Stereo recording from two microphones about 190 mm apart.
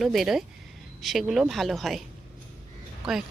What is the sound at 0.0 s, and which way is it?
A woman's voice, centre (ahead or behind).